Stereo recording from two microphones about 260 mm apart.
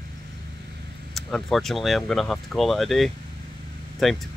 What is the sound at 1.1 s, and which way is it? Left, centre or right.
Speech, centre.